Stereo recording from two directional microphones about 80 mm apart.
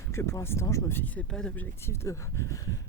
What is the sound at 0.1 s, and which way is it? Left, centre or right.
Speech, left.